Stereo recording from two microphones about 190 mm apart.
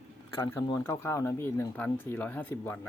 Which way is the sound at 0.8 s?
15° left (ahead or behind).